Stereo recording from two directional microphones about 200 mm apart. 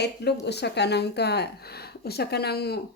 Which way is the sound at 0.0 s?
55° left (ahead or behind).